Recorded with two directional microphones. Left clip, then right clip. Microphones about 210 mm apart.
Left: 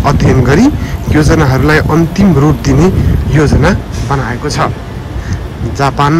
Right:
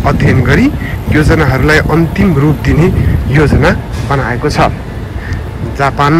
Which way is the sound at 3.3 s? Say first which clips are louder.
Right 1 dB; 15° left (ahead or behind).